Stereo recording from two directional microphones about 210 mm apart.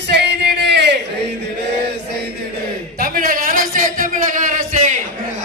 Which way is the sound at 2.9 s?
45° right (ahead or behind).